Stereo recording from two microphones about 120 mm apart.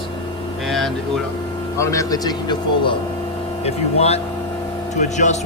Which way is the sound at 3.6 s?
60° left (ahead or behind).